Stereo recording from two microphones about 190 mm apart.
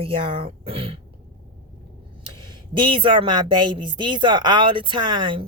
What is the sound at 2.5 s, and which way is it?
A woman's voice, 25° right (ahead or behind).